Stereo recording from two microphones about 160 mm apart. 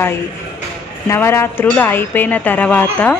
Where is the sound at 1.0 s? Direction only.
15° left (ahead or behind).